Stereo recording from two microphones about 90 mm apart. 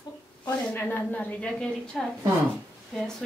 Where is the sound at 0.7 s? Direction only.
20° left (ahead or behind).